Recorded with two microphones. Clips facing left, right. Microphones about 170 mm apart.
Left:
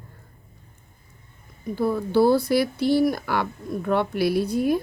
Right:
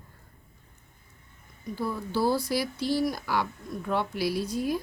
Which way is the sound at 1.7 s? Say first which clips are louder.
Left 9 dB; 60° left (ahead or behind).